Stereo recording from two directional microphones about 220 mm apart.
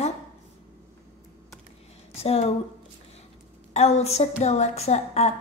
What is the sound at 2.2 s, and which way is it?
Speech, 25° left (ahead or behind).